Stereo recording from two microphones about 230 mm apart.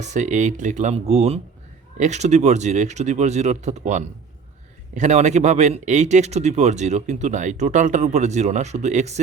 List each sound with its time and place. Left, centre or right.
0.0 s speech: right